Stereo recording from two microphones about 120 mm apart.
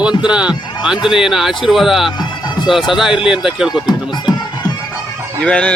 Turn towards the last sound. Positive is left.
turn(degrees=10)  # may be behind; listen again after turning